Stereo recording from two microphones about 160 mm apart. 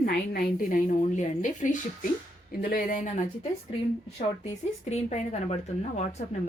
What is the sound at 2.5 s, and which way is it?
Speech, 70° left (ahead or behind).